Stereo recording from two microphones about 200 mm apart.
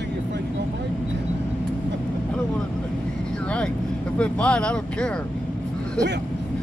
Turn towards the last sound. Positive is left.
turn(degrees=5)  # may be behind; listen again after turning